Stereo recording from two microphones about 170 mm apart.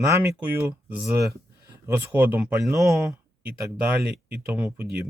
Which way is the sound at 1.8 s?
15° right (ahead or behind).